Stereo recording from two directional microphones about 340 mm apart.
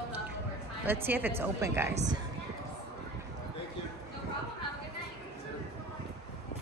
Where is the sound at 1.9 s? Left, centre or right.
Right.